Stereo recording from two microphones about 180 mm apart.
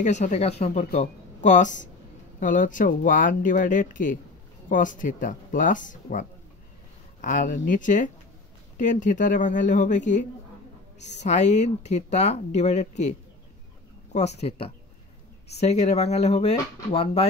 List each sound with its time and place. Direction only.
0.0 s speech: 40° left (ahead or behind)
0.7 s speech: 50° left (ahead or behind)
15.6 s speech: 40° left (ahead or behind)